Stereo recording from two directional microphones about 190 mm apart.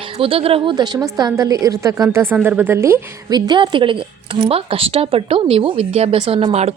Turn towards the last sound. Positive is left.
turn(degrees=-35)  # may be behind; listen again after turning